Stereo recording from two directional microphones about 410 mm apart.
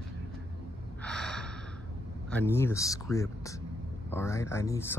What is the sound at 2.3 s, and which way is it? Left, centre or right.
Speech, centre.